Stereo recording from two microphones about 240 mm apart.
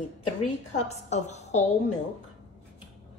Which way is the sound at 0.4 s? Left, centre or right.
Left.